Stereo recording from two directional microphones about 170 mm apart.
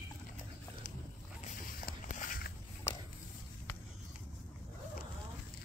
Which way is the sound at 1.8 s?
50° left (ahead or behind).